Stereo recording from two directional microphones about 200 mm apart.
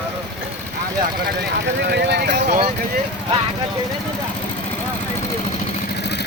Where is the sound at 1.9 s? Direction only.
60° right (ahead or behind).